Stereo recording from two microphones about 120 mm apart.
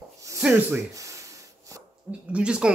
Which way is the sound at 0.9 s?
25° right (ahead or behind).